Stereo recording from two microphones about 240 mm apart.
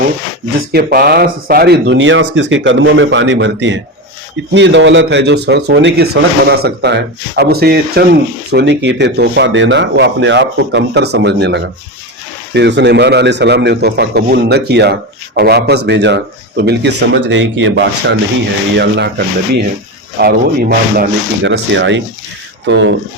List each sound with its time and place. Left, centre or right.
0.7 s speech: right